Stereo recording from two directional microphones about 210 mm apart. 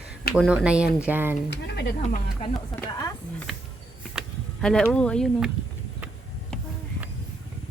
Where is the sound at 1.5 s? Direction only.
55° left (ahead or behind).